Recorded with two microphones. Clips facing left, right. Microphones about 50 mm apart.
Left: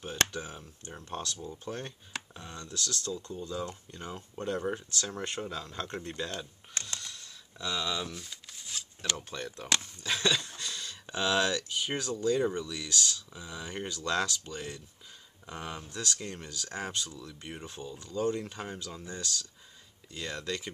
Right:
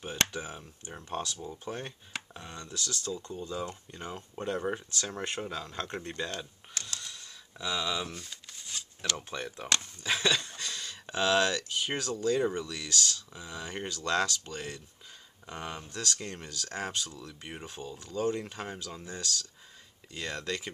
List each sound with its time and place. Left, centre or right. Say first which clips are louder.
0.0 s speech: even; centre
6.7 s mechanisms: left 2 dB; left
7.0 s a sound: even; centre
9.3 s speech: even; centre
12.4 s speech: even; centre
12.6 s speech: even; centre
13.3 s speech: right 1 dB; centre
16.4 s speech: right 2 dB; centre